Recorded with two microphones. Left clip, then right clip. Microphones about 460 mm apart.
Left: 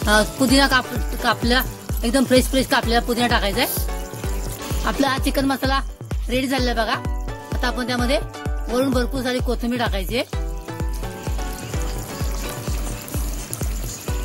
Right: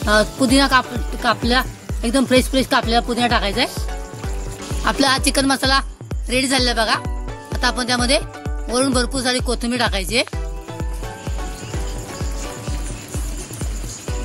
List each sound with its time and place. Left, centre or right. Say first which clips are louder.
0.0 s speech: right 1 dB; left
4.8 s speech: right 4 dB; left